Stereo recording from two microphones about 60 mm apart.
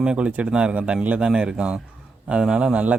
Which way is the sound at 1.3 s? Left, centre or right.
Centre.